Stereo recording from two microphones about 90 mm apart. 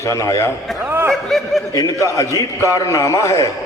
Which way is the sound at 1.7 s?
40° left (ahead or behind).